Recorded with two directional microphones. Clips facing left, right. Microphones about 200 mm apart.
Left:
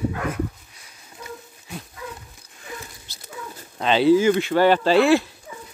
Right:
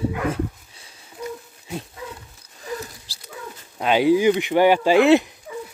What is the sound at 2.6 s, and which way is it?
Rodents, 30° right (ahead or behind).